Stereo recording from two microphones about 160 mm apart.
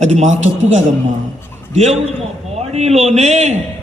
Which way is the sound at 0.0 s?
45° right (ahead or behind).